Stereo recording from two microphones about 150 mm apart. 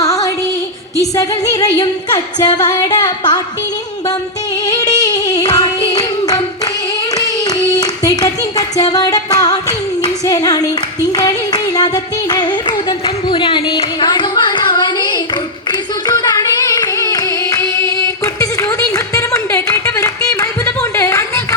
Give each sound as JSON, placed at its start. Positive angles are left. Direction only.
{"t": 0.0, "sound": "music", "side_deg": 20}
{"t": 4.6, "sound": "singing", "side_deg": 25}
{"t": 7.1, "sound": "clapping", "side_deg": 25}
{"t": 8.8, "sound": "singing", "side_deg": 25}
{"t": 12.3, "sound": "a sound", "side_deg": 30}
{"t": 16.0, "sound": "singing", "side_deg": 25}